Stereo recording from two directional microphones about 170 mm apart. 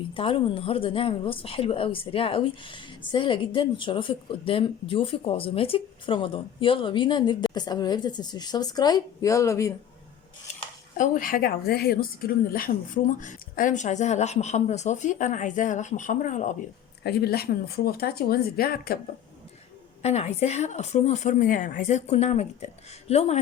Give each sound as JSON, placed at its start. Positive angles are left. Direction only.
{"t": 0.1, "sound": "a woman's voice", "side_deg": 30}
{"t": 10.5, "sound": "speech", "side_deg": 50}
{"t": 17.0, "sound": "speech", "side_deg": 75}
{"t": 20.0, "sound": "speech", "side_deg": 40}